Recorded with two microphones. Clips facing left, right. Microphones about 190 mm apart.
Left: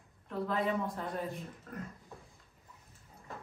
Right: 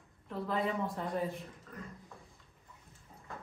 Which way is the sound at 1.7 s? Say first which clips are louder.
Left 8 dB; 55° left (ahead or behind).